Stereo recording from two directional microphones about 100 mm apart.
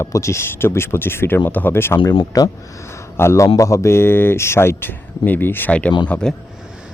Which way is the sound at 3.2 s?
30° left (ahead or behind).